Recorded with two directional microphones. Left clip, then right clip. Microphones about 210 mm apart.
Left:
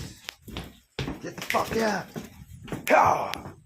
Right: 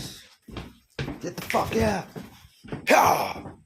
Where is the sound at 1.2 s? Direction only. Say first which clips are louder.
Right 1 dB; 30° right (ahead or behind).